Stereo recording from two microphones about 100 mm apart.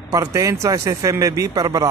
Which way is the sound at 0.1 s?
30° right (ahead or behind).